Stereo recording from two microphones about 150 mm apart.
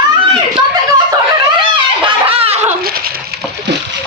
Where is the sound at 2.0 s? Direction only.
40° right (ahead or behind).